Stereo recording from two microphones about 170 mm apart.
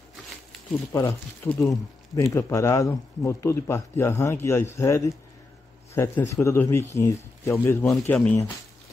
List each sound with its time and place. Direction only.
0.9 s speech: 15° left (ahead or behind)